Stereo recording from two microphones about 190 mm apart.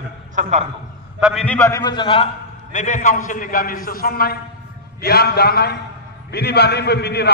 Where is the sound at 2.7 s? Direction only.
40° left (ahead or behind).